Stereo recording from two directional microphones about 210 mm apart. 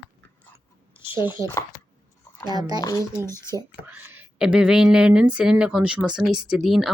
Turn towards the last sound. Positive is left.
turn(degrees=0)  # may be behind; listen again after turning